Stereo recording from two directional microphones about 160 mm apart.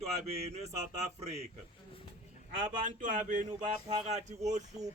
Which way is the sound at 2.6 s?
55° right (ahead or behind).